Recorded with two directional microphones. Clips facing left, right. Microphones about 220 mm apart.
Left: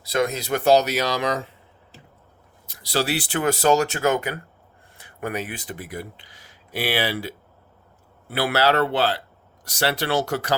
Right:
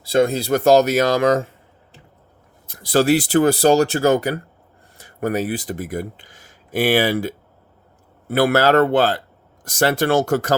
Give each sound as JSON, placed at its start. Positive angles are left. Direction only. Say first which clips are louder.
{"t": 0.0, "sound": "speech", "louder": "right 6 dB", "side_deg": -30}
{"t": 2.6, "sound": "speech", "louder": "right 9 dB", "side_deg": -50}